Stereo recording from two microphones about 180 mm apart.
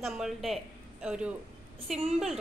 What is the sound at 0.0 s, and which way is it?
A woman's voice, centre (ahead or behind).